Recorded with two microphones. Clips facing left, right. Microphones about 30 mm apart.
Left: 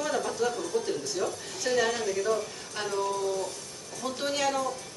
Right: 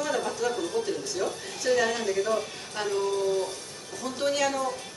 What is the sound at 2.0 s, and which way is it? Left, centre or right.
Speech, centre.